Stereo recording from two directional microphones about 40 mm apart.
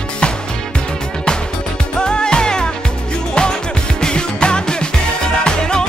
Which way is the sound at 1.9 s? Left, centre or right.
Left.